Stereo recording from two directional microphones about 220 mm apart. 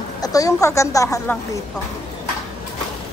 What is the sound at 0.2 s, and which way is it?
A woman's voice, 15° left (ahead or behind).